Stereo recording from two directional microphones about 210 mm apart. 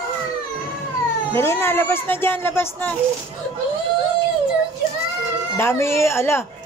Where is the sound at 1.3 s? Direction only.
10° left (ahead or behind).